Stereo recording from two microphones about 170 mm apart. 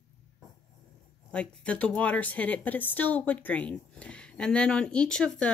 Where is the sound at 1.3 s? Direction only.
5° left (ahead or behind).